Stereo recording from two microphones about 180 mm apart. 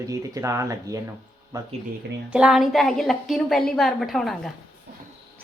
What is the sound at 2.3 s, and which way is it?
A woman's voice, 5° right (ahead or behind).